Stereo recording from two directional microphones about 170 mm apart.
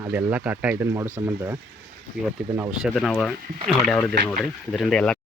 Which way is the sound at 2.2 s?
5° right (ahead or behind).